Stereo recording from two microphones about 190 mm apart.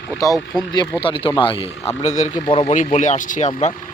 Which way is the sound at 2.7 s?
40° left (ahead or behind).